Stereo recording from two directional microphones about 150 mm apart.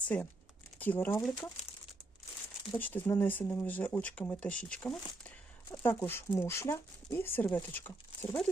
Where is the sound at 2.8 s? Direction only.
10° left (ahead or behind).